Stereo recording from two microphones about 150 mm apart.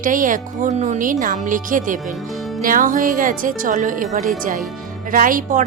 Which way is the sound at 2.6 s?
65° right (ahead or behind).